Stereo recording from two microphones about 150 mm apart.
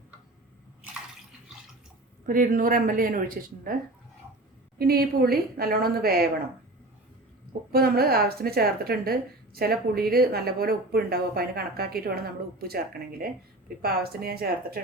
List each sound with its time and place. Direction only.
2.2 s speech: 65° right (ahead or behind)
4.8 s a woman's voice: 90° right
7.7 s a woman's voice: 90° right